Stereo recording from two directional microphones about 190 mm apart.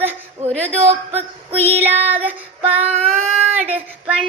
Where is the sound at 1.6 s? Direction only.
10° right (ahead or behind).